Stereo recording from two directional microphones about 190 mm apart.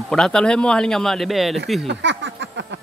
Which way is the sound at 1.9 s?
70° right (ahead or behind).